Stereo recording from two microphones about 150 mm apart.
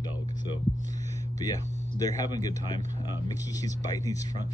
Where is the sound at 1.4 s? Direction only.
25° left (ahead or behind).